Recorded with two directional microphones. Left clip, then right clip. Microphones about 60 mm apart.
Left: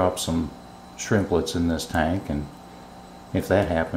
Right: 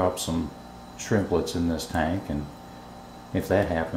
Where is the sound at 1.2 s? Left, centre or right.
Left.